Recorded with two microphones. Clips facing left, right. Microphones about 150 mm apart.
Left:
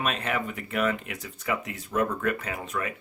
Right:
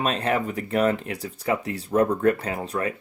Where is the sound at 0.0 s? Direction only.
35° right (ahead or behind).